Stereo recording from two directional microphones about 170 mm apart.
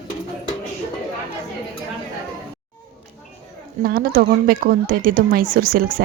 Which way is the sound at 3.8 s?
60° right (ahead or behind).